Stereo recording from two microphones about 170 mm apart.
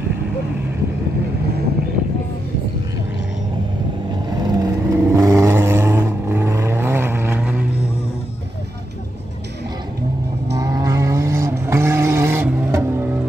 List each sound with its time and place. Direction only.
4.3 s vehicle: 20° right (ahead or behind)
10.5 s vehicle: 20° right (ahead or behind)